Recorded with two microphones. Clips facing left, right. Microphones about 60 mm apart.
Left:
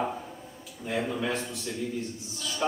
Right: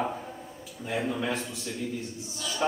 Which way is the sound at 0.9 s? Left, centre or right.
Centre.